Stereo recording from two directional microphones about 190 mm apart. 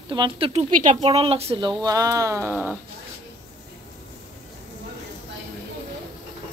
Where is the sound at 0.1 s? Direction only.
25° right (ahead or behind); by 2.7 s 10° right (ahead or behind).